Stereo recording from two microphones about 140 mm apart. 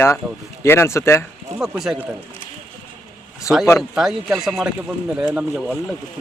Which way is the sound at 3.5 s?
20° left (ahead or behind).